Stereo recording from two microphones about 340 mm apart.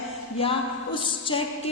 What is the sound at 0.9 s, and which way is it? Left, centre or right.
Speech, centre.